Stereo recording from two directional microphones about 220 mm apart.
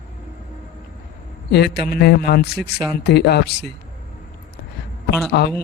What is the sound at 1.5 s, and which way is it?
Speech, 50° left (ahead or behind).